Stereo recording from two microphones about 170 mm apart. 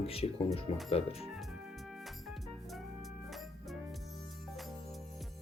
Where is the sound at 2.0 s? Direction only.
Centre (ahead or behind).